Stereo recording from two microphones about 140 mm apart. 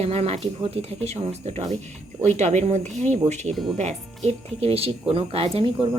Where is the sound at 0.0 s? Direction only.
50° right (ahead or behind).